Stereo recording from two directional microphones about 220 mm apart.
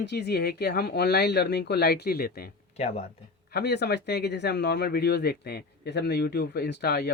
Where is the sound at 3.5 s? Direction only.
50° left (ahead or behind).